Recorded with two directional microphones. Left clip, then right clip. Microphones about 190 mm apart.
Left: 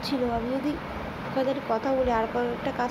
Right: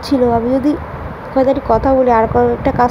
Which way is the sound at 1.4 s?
40° right (ahead or behind).